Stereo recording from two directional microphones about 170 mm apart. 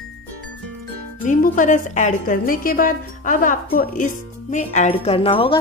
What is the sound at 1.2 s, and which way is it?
A woman's voice, 50° left (ahead or behind).